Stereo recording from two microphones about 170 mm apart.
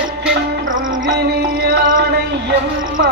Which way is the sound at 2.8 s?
55° right (ahead or behind).